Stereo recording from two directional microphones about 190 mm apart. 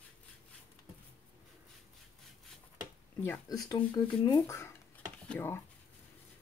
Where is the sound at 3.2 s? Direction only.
15° left (ahead or behind).